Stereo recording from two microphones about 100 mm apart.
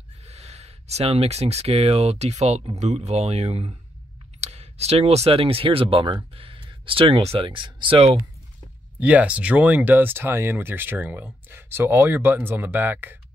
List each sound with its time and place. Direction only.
0.2 s speech: 90° right; by 8.2 s 65° right (ahead or behind)
9.0 s speech: 15° right (ahead or behind)